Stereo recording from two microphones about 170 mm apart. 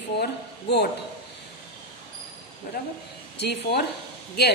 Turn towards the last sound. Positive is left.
turn(degrees=70)  # may be behind; listen again after turning